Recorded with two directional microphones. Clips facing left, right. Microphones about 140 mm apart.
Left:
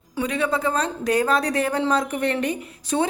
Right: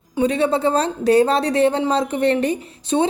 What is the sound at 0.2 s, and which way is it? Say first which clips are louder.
A woman's voice: right 5 dB; 30° right (ahead or behind).